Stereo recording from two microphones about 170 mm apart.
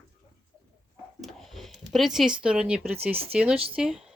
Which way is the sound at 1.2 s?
Centre (ahead or behind).